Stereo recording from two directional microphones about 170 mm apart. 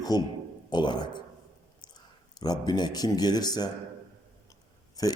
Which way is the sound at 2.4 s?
25° left (ahead or behind).